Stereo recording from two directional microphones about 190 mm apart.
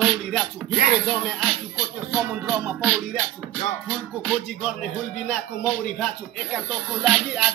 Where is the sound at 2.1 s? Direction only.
5° right (ahead or behind).